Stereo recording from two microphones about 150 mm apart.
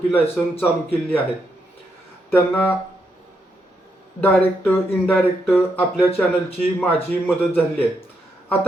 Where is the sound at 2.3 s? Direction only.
15° left (ahead or behind).